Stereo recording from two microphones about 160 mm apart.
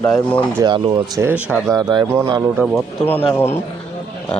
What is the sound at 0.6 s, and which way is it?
Speech, 30° right (ahead or behind).